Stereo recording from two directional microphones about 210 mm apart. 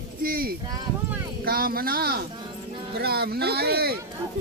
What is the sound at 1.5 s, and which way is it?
Speech, 45° right (ahead or behind).